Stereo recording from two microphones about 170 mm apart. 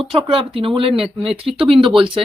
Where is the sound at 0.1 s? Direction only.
30° right (ahead or behind).